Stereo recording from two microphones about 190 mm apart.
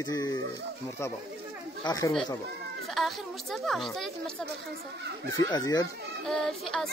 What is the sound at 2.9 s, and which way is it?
A woman's voice, centre (ahead or behind).